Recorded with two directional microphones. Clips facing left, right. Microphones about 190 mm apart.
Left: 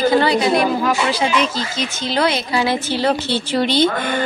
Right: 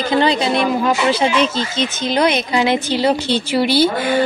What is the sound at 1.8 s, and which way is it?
A woman's voice, 20° right (ahead or behind).